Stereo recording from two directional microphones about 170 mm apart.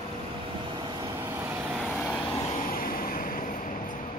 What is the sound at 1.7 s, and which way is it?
Vehicle, centre (ahead or behind).